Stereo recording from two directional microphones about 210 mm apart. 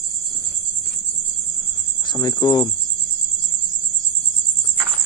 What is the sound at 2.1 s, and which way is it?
Cricket, 15° left (ahead or behind).